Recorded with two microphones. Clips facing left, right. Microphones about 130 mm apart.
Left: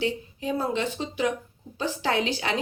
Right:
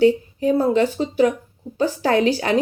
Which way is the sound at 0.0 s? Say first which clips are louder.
Right 12 dB; 40° right (ahead or behind).